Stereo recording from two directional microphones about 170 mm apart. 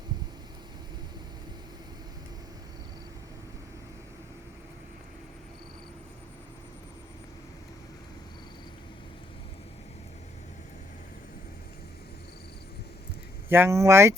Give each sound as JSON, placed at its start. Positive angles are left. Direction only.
{"t": 13.5, "sound": "speech", "side_deg": -15}